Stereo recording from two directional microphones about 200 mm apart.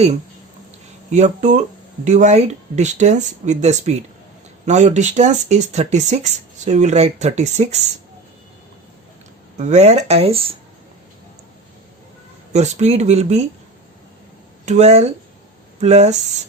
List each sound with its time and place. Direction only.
1.1 s speech: 35° right (ahead or behind)
9.6 s speech: 35° right (ahead or behind)
12.5 s speech: 35° right (ahead or behind)
14.6 s speech: 35° right (ahead or behind)